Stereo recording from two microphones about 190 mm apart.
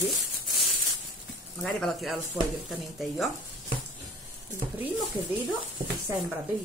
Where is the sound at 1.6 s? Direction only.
Centre (ahead or behind).